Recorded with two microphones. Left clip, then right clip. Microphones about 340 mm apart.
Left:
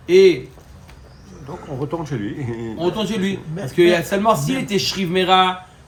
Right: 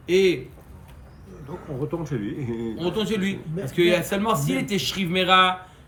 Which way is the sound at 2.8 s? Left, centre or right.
Centre.